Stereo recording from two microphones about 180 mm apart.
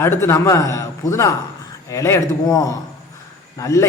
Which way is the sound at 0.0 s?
15° left (ahead or behind).